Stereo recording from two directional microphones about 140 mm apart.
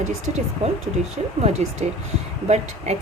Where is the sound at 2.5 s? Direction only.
50° right (ahead or behind).